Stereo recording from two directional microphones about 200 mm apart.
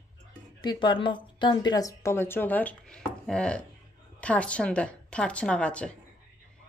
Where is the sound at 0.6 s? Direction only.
25° left (ahead or behind); by 5.9 s 5° left (ahead or behind).